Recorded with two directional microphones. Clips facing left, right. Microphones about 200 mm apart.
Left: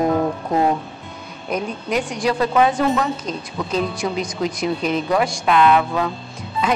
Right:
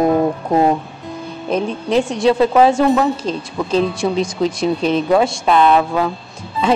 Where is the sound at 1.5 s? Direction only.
30° right (ahead or behind).